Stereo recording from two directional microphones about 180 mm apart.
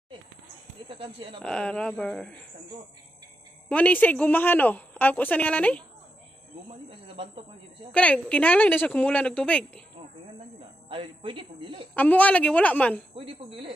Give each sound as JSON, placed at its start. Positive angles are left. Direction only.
{"t": 0.8, "sound": "speech", "side_deg": -30}
{"t": 1.4, "sound": "speech", "side_deg": 5}
{"t": 3.6, "sound": "a woman's voice", "side_deg": 5}
{"t": 7.9, "sound": "a woman's voice", "side_deg": 5}
{"t": 10.9, "sound": "a woman's voice", "side_deg": -30}
{"t": 11.9, "sound": "a woman's voice", "side_deg": 10}
{"t": 13.1, "sound": "speech", "side_deg": -30}